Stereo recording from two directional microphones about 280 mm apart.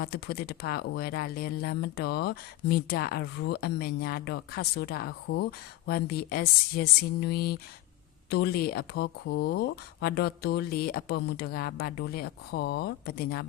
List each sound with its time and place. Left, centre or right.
0.0 s speech: left